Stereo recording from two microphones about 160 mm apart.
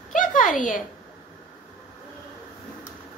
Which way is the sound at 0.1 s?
55° left (ahead or behind).